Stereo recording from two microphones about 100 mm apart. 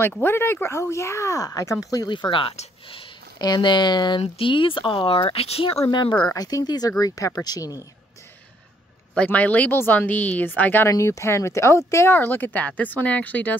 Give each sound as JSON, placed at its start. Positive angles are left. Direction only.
{"t": 0.2, "sound": "speech", "side_deg": 25}
{"t": 2.1, "sound": "speech", "side_deg": 55}
{"t": 3.3, "sound": "speech", "side_deg": 45}
{"t": 4.2, "sound": "speech", "side_deg": 60}
{"t": 5.9, "sound": "speech", "side_deg": 50}
{"t": 6.2, "sound": "speech", "side_deg": 40}
{"t": 9.1, "sound": "speech", "side_deg": 15}
{"t": 10.9, "sound": "speech", "side_deg": 30}